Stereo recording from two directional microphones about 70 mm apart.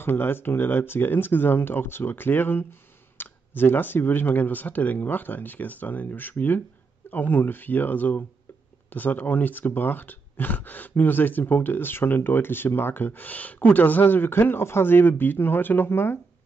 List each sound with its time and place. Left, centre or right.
0.0 s speech: left